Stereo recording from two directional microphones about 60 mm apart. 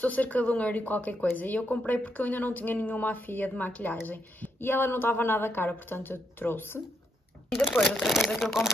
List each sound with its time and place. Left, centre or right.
0.0 s a woman's voice: left
7.8 s speech: centre
8.3 s speech: centre